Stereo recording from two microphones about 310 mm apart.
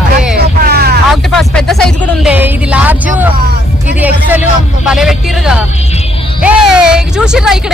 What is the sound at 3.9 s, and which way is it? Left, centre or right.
Speech, centre.